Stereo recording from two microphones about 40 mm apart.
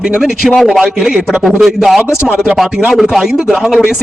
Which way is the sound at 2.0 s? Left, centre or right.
Centre.